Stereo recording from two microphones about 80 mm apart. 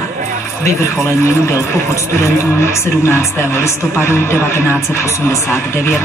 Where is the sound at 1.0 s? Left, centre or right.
Left.